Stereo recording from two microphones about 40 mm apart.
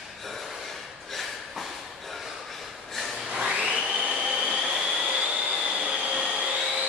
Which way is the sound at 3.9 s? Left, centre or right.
Right.